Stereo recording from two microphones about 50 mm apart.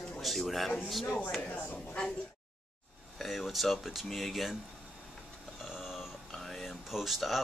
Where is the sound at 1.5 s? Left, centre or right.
Left.